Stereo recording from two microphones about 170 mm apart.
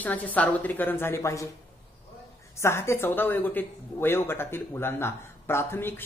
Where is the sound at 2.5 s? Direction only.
15° left (ahead or behind).